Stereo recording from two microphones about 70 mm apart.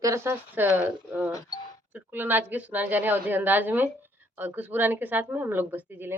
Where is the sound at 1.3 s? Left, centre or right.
Left.